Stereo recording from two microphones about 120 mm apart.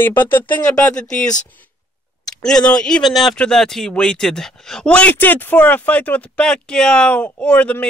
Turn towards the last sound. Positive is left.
turn(degrees=10)  # may be behind; listen again after turning